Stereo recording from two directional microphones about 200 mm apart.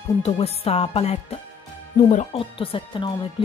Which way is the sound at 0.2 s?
30° left (ahead or behind).